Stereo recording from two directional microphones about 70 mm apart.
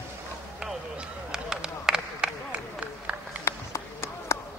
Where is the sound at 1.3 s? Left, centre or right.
Centre.